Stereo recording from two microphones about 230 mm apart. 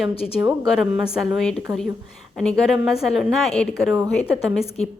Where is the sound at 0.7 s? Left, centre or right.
Centre.